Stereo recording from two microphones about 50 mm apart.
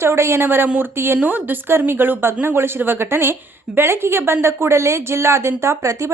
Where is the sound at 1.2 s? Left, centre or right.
Right.